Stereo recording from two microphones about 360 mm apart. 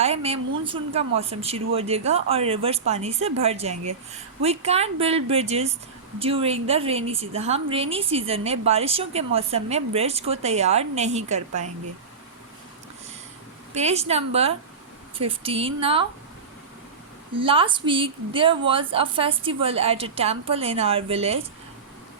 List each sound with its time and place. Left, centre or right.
0.0 s a woman's voice: centre
13.7 s a woman's voice: centre
17.3 s a woman's voice: centre